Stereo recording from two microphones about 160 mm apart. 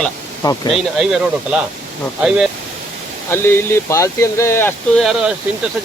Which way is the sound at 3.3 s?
15° left (ahead or behind).